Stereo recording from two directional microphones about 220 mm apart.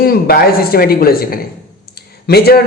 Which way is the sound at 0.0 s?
45° left (ahead or behind).